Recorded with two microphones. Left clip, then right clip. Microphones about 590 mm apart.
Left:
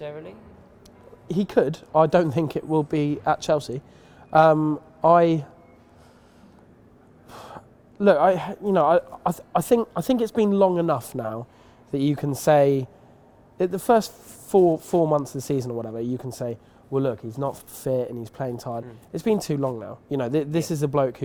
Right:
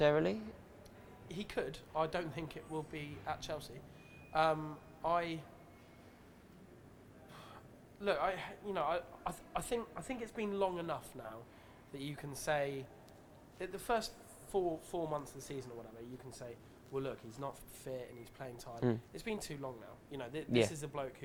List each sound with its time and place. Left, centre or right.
0.0 s speech: right
1.3 s speech: left
7.3 s speech: left
14.5 s speech: left